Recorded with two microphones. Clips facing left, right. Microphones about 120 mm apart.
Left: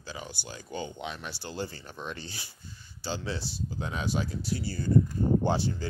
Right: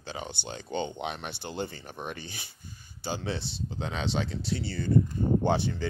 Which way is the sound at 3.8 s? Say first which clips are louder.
Right 2 dB; 75° right (ahead or behind).